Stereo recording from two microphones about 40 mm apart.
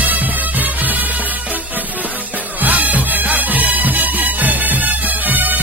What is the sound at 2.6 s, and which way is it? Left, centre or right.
Music, right.